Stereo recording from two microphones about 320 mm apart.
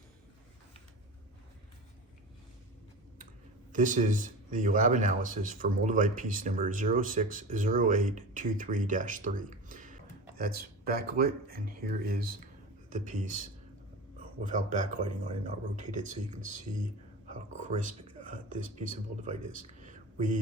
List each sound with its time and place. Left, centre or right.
3.7 s speech: right
14.4 s speech: right
19.5 s a sound: right